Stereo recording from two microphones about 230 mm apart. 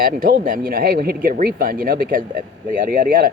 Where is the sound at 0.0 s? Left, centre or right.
Right.